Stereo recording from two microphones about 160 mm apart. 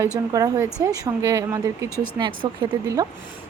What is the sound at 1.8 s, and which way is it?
Speech, 15° left (ahead or behind).